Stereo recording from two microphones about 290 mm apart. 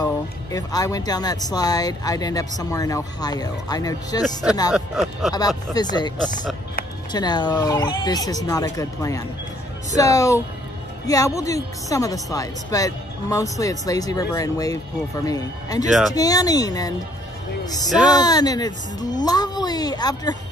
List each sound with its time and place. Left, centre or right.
0.0 s speech: centre
4.7 s speech: centre
5.7 s speech: centre
18.1 s speech: centre